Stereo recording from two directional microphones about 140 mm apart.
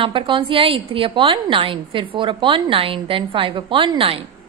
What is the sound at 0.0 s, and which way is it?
A woman's voice, 40° right (ahead or behind).